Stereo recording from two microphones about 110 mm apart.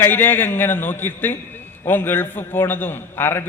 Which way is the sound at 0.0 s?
20° left (ahead or behind).